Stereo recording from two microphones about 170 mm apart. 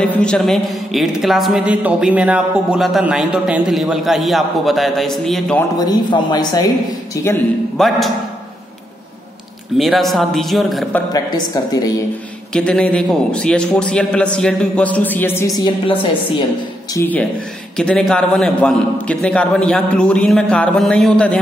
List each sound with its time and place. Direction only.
0.0 s a woman's voice: 5° left (ahead or behind)
5.6 s speech: 20° left (ahead or behind)
7.7 s a woman's voice: centre (ahead or behind)
9.8 s a woman's voice: centre (ahead or behind)
11.1 s speech: 20° left (ahead or behind)
12.5 s a woman's voice: 5° left (ahead or behind); by 16.4 s 30° left (ahead or behind)
16.9 s a woman's voice: 10° left (ahead or behind)